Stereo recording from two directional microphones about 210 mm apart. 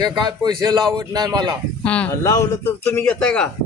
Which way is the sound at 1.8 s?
5° left (ahead or behind).